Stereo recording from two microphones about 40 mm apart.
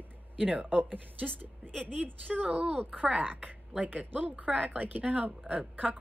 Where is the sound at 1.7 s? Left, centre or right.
Centre.